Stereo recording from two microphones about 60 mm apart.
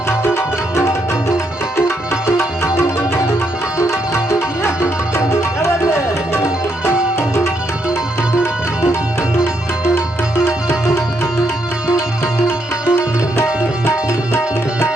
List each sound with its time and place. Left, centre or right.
0.3 s tabla: left
3.8 s music: left
9.9 s music: left
12.5 s music: centre